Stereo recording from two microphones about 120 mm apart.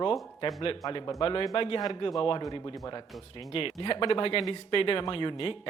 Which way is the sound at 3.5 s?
45° left (ahead or behind).